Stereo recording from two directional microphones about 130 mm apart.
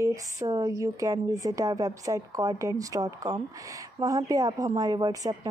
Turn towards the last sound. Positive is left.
turn(degrees=-30)  # may be behind; listen again after turning